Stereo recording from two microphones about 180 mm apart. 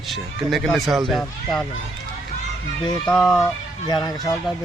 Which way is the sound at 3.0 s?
5° left (ahead or behind).